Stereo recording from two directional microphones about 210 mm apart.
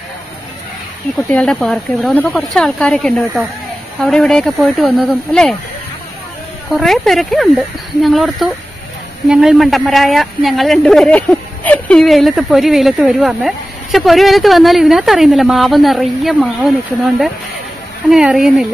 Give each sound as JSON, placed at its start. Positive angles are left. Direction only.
{"t": 1.3, "sound": "speech", "side_deg": 5}
{"t": 6.7, "sound": "speech", "side_deg": 0}
{"t": 18.1, "sound": "speech", "side_deg": 0}